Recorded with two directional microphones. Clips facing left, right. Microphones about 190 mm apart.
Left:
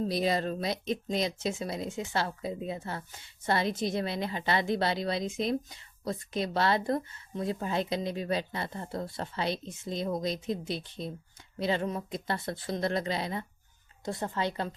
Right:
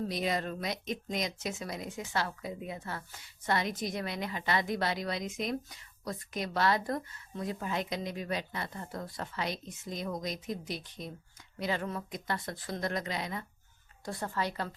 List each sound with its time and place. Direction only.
0.0 s speech: 35° left (ahead or behind)